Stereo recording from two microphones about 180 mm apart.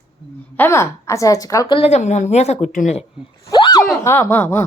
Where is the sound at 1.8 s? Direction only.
40° left (ahead or behind).